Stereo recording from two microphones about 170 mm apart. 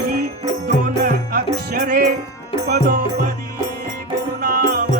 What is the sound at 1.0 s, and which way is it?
Music, 60° right (ahead or behind).